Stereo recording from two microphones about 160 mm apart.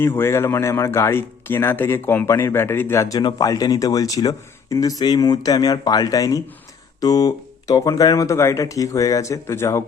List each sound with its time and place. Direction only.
0.0 s speech: 15° left (ahead or behind)